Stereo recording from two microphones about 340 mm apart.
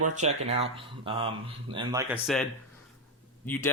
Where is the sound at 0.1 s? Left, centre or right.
Right.